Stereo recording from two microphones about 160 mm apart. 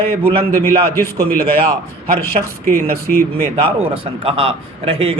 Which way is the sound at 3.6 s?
35° right (ahead or behind).